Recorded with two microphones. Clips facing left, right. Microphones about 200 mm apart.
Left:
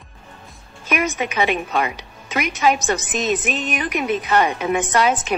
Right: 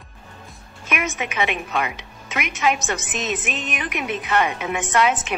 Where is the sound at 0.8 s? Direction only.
35° left (ahead or behind).